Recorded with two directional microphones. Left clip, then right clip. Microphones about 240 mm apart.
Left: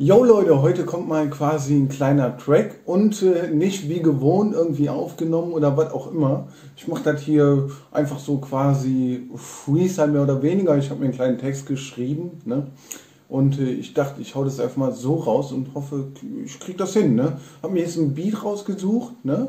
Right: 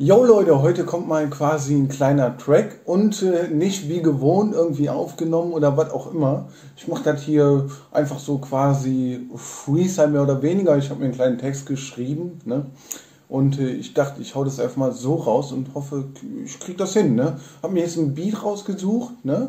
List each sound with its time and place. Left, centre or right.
0.0 s a man's voice: centre
13.3 s a man's voice: centre